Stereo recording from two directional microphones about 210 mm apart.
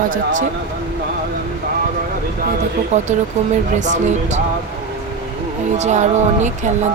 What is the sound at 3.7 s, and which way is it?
Speech, 35° right (ahead or behind).